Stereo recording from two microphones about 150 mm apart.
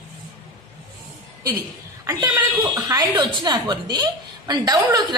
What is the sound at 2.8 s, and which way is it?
A woman's voice, 25° right (ahead or behind).